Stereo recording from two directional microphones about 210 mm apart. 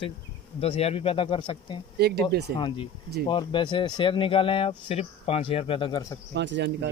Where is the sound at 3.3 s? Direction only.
20° left (ahead or behind).